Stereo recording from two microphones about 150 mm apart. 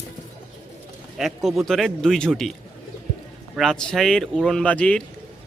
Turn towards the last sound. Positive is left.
turn(degrees=10)  # may be behind; listen again after turning